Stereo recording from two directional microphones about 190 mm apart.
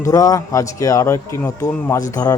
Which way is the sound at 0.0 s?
15° left (ahead or behind).